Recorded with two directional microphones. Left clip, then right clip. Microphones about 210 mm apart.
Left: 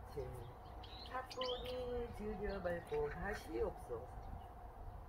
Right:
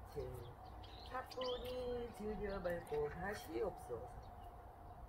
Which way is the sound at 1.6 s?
15° right (ahead or behind).